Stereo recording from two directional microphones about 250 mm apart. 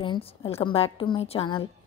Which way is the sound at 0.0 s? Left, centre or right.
Left.